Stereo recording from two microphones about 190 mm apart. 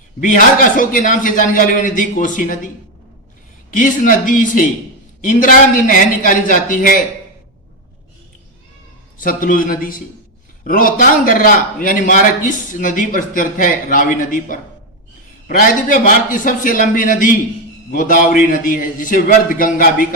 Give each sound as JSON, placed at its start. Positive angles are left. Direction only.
{"t": 0.2, "sound": "a man's voice", "side_deg": 45}
{"t": 3.7, "sound": "a man's voice", "side_deg": 45}
{"t": 9.1, "sound": "a man's voice", "side_deg": 45}